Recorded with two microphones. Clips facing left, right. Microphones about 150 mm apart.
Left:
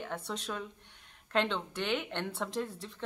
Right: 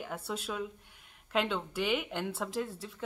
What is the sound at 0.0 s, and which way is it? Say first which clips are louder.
A woman's voice: even; 5° right (ahead or behind).